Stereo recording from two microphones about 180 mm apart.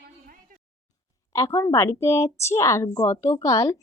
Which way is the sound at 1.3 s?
15° left (ahead or behind).